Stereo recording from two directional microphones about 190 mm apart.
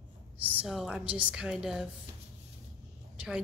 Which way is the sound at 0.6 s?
Centre (ahead or behind).